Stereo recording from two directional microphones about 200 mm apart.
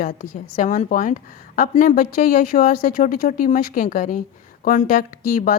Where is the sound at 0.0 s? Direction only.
40° left (ahead or behind).